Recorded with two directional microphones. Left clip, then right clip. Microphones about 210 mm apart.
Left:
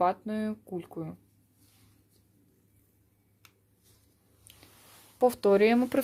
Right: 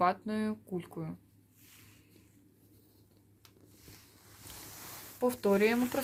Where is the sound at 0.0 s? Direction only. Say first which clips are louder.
Left 2 dB; 35° left (ahead or behind).